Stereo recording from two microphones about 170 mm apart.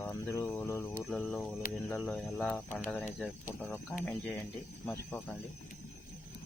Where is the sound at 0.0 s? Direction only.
15° left (ahead or behind).